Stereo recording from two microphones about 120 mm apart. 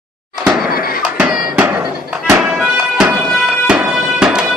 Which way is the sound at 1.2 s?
15° right (ahead or behind).